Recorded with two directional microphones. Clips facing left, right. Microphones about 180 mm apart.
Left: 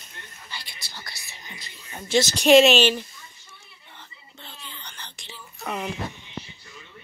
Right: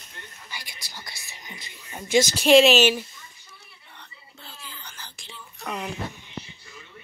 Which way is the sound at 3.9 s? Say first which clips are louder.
Left 1 dB; centre (ahead or behind).